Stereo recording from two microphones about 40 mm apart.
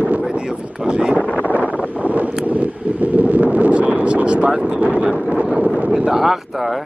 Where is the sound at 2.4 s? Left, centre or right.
Right.